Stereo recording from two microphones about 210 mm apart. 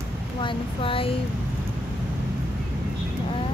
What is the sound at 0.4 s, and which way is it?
Speech, 25° left (ahead or behind).